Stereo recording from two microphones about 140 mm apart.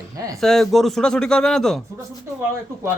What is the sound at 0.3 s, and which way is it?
Speech, centre (ahead or behind).